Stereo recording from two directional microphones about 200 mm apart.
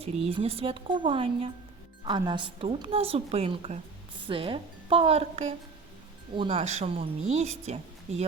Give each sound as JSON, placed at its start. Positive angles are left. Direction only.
{"t": 0.0, "sound": "a woman's voice", "side_deg": -30}